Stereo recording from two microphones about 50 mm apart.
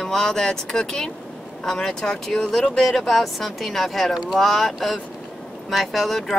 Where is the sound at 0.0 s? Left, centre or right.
Centre.